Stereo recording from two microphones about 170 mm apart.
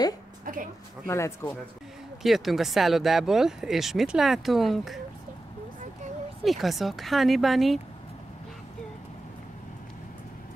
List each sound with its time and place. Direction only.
1.0 s a man's voice: 15° left (ahead or behind)
2.2 s speech: centre (ahead or behind)
6.4 s speech: centre (ahead or behind)